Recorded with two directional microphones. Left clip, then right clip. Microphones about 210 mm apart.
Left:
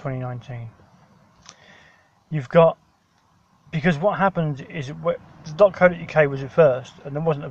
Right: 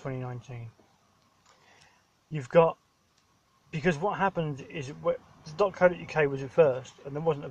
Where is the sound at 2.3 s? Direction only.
Centre (ahead or behind).